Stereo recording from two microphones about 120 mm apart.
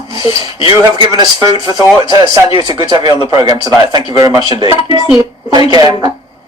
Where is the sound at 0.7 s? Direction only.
35° right (ahead or behind).